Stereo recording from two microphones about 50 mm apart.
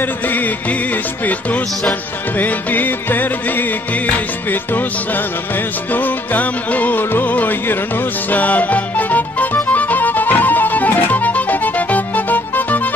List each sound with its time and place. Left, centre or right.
1.2 s music: left
5.9 s music: left